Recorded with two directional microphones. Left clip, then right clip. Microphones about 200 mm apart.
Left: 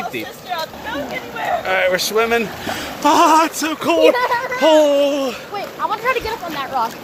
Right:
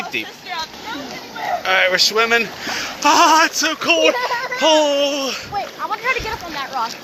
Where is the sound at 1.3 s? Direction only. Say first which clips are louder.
Right 1 dB; 5° left (ahead or behind).